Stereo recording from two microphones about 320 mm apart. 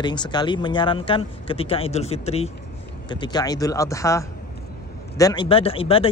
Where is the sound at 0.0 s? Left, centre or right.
Centre.